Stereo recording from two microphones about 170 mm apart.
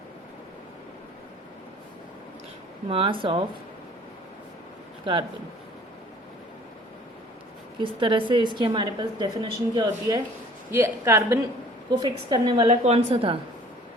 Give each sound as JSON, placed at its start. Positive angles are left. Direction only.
{"t": 2.9, "sound": "a woman's voice", "side_deg": -30}
{"t": 7.8, "sound": "a woman's voice", "side_deg": -30}
{"t": 12.6, "sound": "a woman's voice", "side_deg": -35}